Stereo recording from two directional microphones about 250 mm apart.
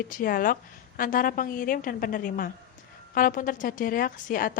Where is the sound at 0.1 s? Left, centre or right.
Left.